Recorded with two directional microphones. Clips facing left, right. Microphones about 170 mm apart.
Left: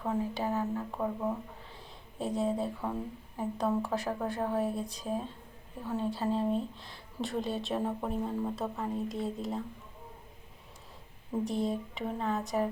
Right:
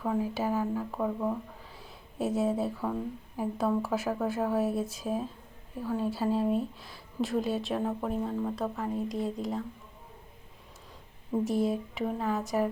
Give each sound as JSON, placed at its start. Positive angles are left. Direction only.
{"t": 0.0, "sound": "a sound", "side_deg": 0}
{"t": 0.7, "sound": "speech", "side_deg": 0}
{"t": 11.4, "sound": "speech", "side_deg": -5}